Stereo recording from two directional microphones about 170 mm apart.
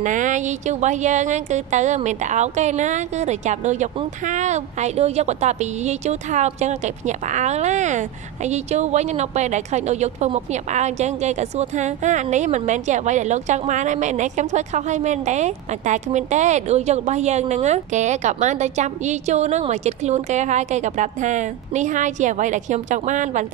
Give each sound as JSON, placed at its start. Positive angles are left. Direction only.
{"t": 0.0, "sound": "a woman's voice", "side_deg": -50}